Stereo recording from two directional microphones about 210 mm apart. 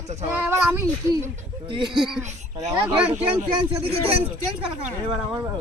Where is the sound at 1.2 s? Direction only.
25° right (ahead or behind).